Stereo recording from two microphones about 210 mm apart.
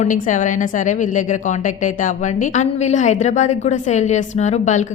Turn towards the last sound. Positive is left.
turn(degrees=35)  # may be behind; listen again after turning